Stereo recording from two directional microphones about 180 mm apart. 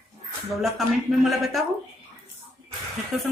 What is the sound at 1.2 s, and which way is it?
Speech, centre (ahead or behind).